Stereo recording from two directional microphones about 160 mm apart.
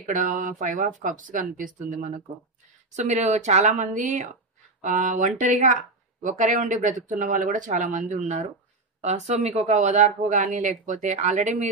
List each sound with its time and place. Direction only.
0.0 s speech: 50° right (ahead or behind)